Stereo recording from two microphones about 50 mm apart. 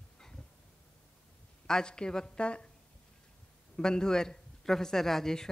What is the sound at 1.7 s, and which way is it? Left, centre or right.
Speech, centre.